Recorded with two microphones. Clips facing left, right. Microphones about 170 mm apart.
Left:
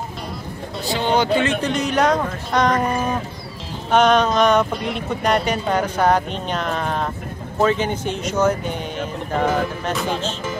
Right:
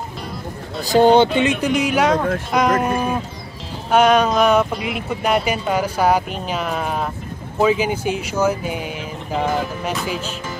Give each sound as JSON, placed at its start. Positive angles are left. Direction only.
{"t": 0.8, "sound": "speech", "side_deg": -40}
{"t": 1.4, "sound": "speech", "side_deg": -10}